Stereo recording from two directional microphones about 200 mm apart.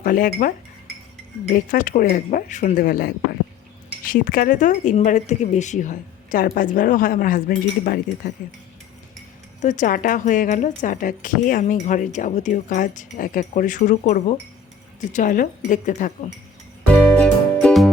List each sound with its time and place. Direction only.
0.0 s a woman's voice: 45° left (ahead or behind)
9.6 s a woman's voice: 40° left (ahead or behind)
17.2 s music: 5° left (ahead or behind)